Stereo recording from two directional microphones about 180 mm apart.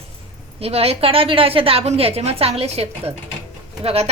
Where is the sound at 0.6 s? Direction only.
35° right (ahead or behind).